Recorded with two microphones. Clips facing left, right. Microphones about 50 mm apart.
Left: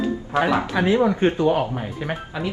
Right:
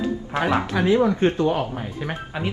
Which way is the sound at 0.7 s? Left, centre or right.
Left.